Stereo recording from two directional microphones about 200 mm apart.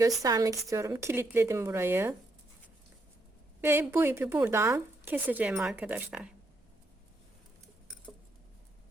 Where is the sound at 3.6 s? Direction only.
10° right (ahead or behind).